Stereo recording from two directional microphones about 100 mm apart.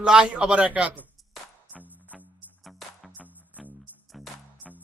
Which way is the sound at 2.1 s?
Centre (ahead or behind).